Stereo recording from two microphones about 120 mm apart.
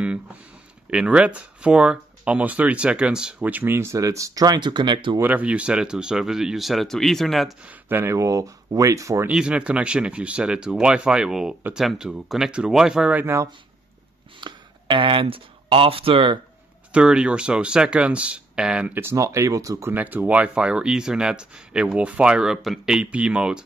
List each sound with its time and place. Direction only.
0.8 s speech: 10° right (ahead or behind); by 5.2 s 40° right (ahead or behind)
5.2 s speech: 10° right (ahead or behind)
7.6 s speech: 20° right (ahead or behind)
9.3 s speech: 5° right (ahead or behind)
13.2 s speech: 20° right (ahead or behind)
14.4 s speech: 45° right (ahead or behind)
16.9 s speech: 5° right (ahead or behind); by 19.9 s 30° right (ahead or behind)
19.9 s speech: 15° right (ahead or behind)